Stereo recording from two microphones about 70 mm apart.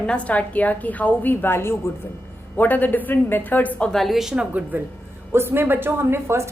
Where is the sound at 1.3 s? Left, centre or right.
Left.